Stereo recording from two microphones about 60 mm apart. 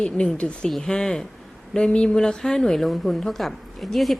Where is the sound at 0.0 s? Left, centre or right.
Centre.